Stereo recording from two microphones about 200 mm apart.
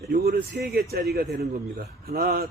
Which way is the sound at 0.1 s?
55° right (ahead or behind).